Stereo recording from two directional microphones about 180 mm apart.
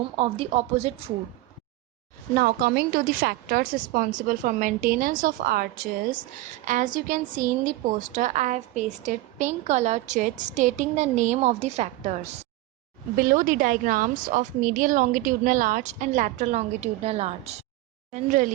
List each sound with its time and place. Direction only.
0.2 s a woman's voice: 35° right (ahead or behind)
2.3 s a woman's voice: 55° right (ahead or behind); by 12.5 s 35° right (ahead or behind)
13.1 s a woman's voice: 50° right (ahead or behind)